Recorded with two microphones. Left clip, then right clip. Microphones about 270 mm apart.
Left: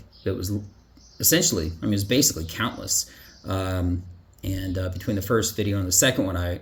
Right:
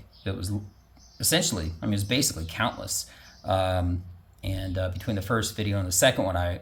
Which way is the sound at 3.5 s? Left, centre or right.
Centre.